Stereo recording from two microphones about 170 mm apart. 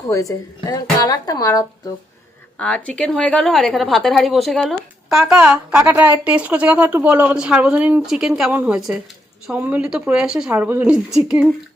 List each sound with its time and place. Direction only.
0.1 s speech: 20° left (ahead or behind)
2.6 s a woman's voice: 5° left (ahead or behind)